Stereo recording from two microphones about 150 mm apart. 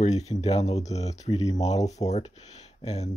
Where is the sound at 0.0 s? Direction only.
45° left (ahead or behind).